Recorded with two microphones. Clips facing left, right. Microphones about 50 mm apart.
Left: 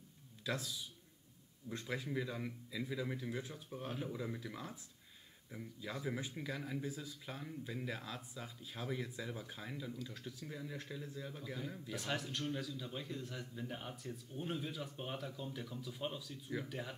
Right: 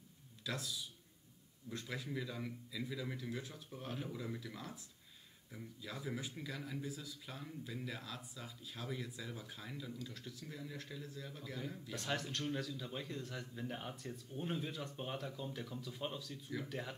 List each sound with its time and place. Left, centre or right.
1.7 s a man's voice: left
3.7 s a man's voice: centre
4.4 s a man's voice: left